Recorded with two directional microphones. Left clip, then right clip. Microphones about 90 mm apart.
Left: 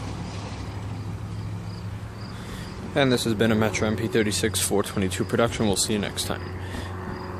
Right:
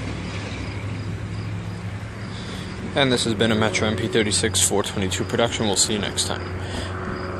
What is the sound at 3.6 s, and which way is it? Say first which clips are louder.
Speech: right 3 dB; 90° left.